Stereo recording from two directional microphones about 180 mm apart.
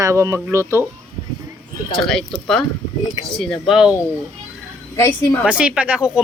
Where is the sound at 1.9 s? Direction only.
Centre (ahead or behind).